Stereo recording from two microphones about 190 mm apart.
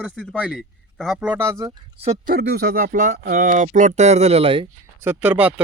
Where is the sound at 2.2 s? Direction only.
50° right (ahead or behind); by 4.7 s 30° right (ahead or behind).